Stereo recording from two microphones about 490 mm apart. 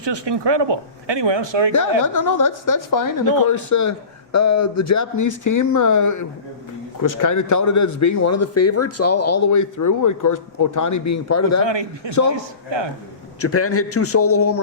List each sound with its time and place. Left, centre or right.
0.0 s speech: right
2.0 s a man's voice: left
11.6 s speech: right
13.4 s a man's voice: left